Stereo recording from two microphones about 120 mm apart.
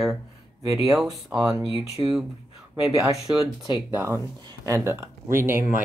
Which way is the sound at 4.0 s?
20° right (ahead or behind).